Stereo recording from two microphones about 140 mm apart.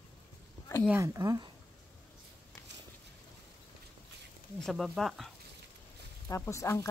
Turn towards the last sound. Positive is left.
turn(degrees=20)  # may be behind; listen again after turning